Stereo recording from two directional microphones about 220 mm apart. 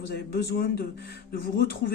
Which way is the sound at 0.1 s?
45° left (ahead or behind).